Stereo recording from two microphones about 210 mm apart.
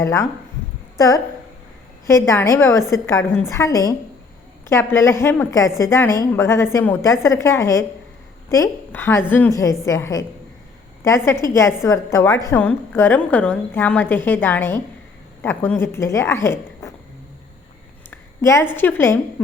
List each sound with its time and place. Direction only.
0.0 s a woman's voice: 15° left (ahead or behind)
18.1 s a sound: 10° left (ahead or behind)
18.8 s a woman's voice: 10° left (ahead or behind)